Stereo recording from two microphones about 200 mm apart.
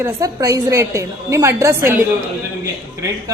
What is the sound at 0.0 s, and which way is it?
Speech, 15° right (ahead or behind).